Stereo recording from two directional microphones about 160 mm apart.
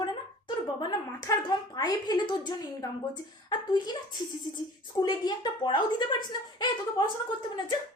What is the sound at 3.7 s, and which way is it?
A woman's voice, 25° left (ahead or behind).